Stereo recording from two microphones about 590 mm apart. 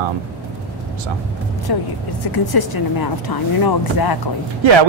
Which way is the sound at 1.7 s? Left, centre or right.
Left.